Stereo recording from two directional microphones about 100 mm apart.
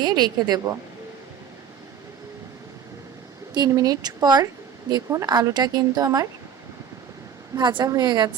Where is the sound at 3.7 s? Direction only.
35° right (ahead or behind).